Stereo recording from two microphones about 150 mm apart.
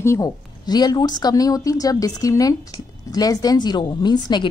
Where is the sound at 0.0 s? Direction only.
20° left (ahead or behind).